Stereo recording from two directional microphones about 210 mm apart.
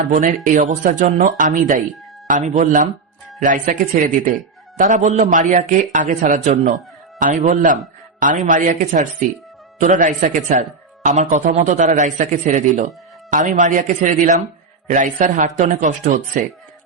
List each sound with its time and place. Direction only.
0.4 s speech: 40° right (ahead or behind)